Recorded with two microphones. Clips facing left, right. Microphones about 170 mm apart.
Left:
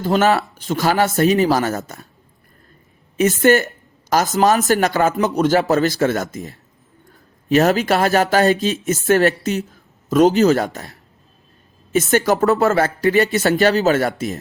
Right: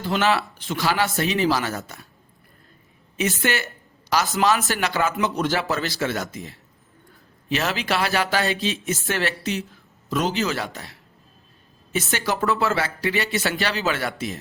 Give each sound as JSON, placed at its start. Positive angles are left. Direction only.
{"t": 0.0, "sound": "speech", "side_deg": 45}
{"t": 3.4, "sound": "speech", "side_deg": 45}
{"t": 12.1, "sound": "speech", "side_deg": 45}